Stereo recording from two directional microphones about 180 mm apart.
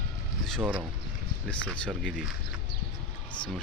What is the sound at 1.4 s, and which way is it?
Speech, 5° left (ahead or behind).